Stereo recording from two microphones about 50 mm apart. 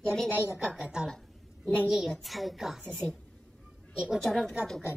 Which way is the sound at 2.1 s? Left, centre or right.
Centre.